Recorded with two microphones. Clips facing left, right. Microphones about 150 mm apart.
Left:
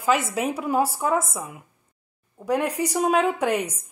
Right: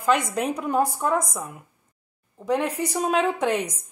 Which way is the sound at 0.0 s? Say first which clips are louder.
Even; 5° left (ahead or behind).